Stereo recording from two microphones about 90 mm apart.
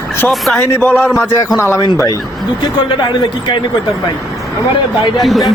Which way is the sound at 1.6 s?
30° left (ahead or behind).